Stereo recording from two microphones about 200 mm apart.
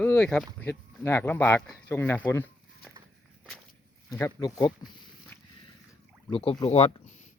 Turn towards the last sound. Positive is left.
turn(degrees=30)  # may be behind; listen again after turning